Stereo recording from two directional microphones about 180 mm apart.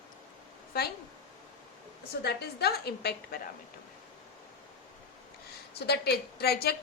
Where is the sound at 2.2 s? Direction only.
60° left (ahead or behind).